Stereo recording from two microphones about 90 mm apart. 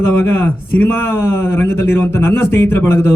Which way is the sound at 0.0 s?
25° left (ahead or behind).